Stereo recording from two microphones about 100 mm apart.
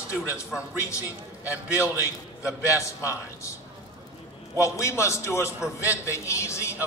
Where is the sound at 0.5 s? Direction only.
10° right (ahead or behind).